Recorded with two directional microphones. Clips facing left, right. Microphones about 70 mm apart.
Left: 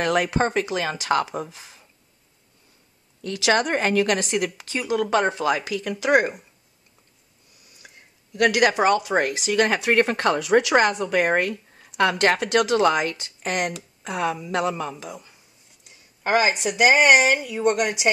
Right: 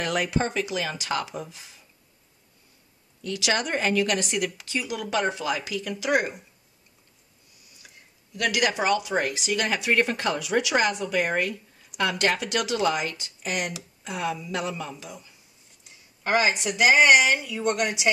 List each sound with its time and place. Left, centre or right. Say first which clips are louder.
0.0 s speech: left 5 dB; left
3.3 s speech: left 5 dB; left
4.2 s speech: left 3 dB; left
8.4 s speech: left 6 dB; left
16.3 s speech: left 3 dB; left